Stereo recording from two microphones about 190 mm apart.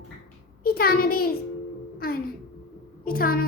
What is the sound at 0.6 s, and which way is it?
A woman's voice, 50° left (ahead or behind).